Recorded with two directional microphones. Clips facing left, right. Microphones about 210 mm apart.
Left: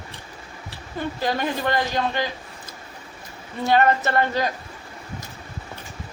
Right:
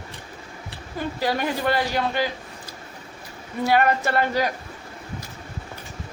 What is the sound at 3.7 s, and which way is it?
Speech, 10° right (ahead or behind).